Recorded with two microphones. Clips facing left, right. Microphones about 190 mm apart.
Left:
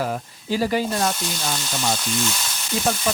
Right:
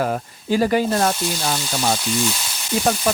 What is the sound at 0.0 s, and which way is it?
Speech, 55° right (ahead or behind).